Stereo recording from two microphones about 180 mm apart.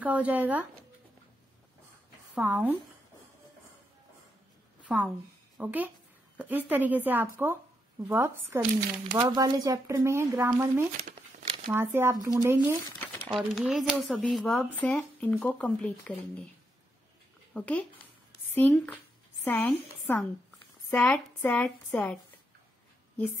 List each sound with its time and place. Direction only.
0.0 s speech: 10° right (ahead or behind)
2.3 s speech: 10° right (ahead or behind)
4.8 s a woman's voice: 5° right (ahead or behind)
9.1 s speech: 25° right (ahead or behind)
13.3 s speech: centre (ahead or behind)
17.6 s a woman's voice: 10° left (ahead or behind)